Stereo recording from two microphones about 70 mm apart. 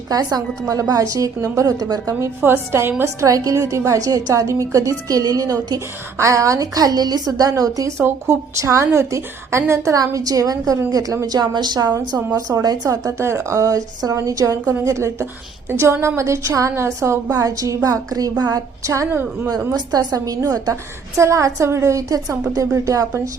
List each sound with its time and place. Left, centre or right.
0.1 s a woman's voice: right
2.4 s a woman's voice: right
3.0 s a woman's voice: right
6.1 s a woman's voice: right
10.1 s a woman's voice: right
11.9 s a woman's voice: right
12.9 s a woman's voice: right
14.8 s a woman's voice: right
17.2 s a woman's voice: right
18.8 s a woman's voice: right
19.5 s a woman's voice: right
21.2 s a woman's voice: right